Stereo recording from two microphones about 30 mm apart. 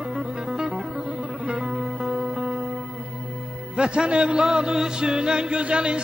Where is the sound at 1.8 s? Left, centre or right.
Centre.